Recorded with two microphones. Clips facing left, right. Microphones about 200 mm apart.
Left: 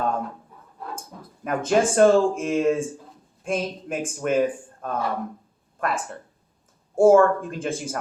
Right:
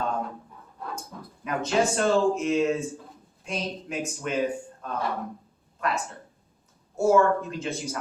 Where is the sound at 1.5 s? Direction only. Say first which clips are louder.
Left 4 dB; 50° left (ahead or behind).